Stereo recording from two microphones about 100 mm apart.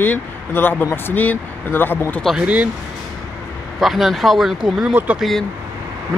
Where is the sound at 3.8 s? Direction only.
Centre (ahead or behind).